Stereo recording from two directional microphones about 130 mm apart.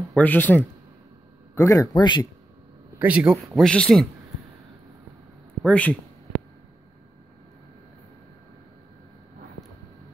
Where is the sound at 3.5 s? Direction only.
5° left (ahead or behind).